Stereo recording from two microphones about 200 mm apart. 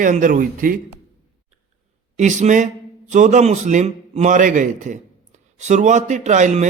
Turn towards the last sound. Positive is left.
turn(degrees=-35)  # may be behind; listen again after turning